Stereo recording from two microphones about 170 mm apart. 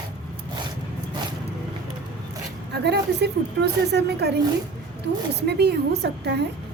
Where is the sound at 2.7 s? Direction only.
80° right.